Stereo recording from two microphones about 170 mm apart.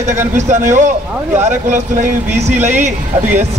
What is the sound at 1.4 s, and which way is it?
Speech, 45° right (ahead or behind).